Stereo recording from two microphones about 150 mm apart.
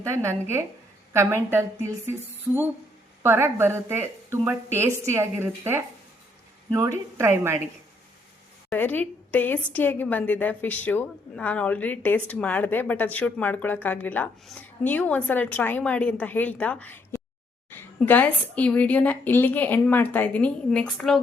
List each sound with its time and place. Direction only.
0.0 s a woman's voice: 20° right (ahead or behind)
8.7 s a woman's voice: 10° left (ahead or behind)